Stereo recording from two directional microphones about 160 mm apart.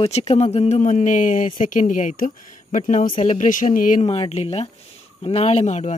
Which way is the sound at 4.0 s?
40° left (ahead or behind).